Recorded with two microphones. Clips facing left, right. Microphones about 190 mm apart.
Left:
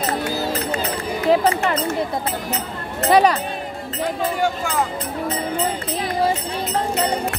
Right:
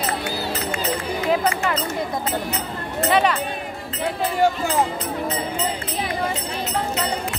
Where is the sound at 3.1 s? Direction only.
35° left (ahead or behind).